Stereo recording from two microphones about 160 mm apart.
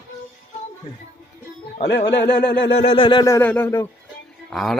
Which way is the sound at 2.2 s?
90° left.